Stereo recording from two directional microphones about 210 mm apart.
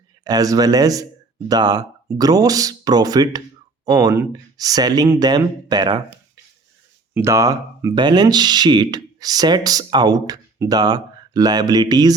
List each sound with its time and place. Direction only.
0.3 s speech: 15° right (ahead or behind)